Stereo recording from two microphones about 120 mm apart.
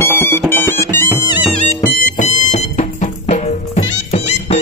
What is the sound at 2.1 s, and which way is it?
Music, 75° left (ahead or behind).